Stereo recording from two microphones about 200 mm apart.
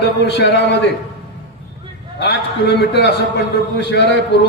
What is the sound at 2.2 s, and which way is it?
A man's voice, 55° left (ahead or behind).